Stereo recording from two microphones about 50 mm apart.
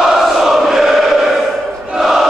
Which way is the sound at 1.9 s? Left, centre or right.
Centre.